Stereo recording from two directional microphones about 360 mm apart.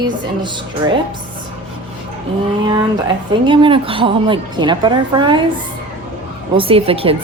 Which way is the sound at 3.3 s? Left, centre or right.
Centre.